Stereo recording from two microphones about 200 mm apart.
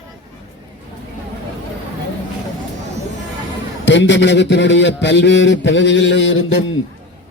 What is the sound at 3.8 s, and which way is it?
A man's voice, 65° left (ahead or behind).